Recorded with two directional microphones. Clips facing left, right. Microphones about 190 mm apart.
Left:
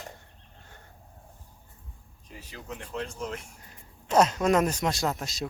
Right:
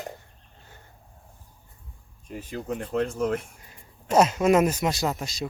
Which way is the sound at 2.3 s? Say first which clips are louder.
Right 10 dB; 50° right (ahead or behind).